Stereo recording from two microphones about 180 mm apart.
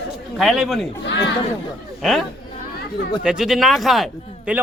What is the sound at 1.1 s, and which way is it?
Speech, 75° left (ahead or behind).